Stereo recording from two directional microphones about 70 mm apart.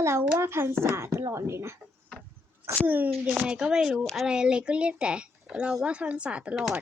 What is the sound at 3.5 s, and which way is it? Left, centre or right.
A woman's voice, centre.